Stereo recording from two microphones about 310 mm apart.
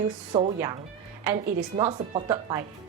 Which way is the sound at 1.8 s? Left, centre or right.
Centre.